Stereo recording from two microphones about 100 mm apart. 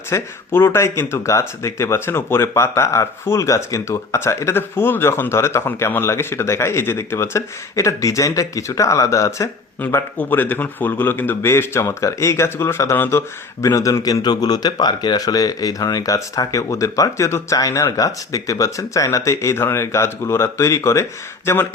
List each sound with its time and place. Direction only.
0.1 s speech: 25° left (ahead or behind)
9.8 s a man's voice: 15° left (ahead or behind)